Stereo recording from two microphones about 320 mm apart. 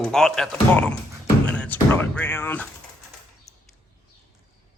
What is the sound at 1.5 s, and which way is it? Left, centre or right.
Music, centre.